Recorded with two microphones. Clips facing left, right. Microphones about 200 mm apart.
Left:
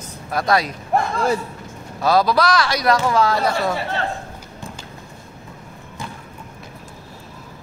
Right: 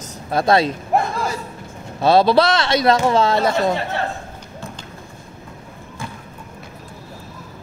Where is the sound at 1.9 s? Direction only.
25° right (ahead or behind).